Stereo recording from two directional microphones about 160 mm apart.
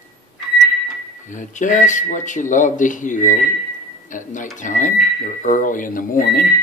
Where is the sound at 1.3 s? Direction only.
50° left (ahead or behind).